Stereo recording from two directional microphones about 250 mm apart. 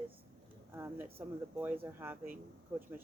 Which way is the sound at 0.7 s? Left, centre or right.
Centre.